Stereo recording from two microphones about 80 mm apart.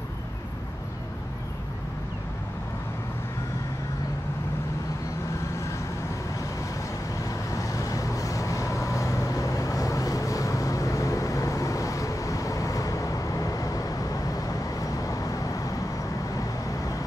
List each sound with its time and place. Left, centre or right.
7.5 s vehicle: left